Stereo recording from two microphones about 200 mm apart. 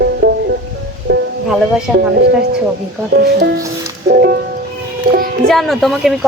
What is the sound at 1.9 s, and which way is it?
Speech, 5° right (ahead or behind).